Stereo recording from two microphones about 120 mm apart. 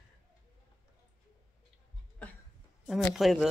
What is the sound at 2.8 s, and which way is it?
Speech, centre (ahead or behind).